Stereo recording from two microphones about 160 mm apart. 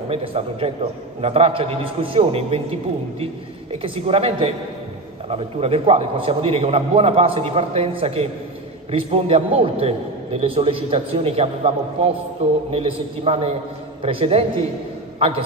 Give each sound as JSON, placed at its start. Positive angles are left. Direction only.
{"t": 0.1, "sound": "a man's voice", "side_deg": -35}
{"t": 3.7, "sound": "a man's voice", "side_deg": -35}